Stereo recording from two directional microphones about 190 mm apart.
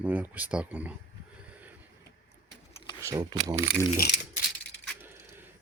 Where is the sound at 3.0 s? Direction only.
15° right (ahead or behind).